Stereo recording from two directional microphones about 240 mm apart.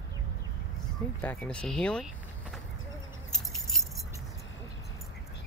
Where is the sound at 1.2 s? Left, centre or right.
Centre.